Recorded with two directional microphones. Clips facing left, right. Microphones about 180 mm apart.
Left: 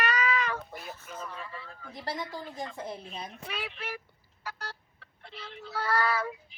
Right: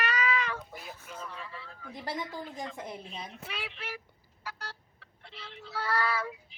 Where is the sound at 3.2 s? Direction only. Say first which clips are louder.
Left 2 dB; 45° left (ahead or behind).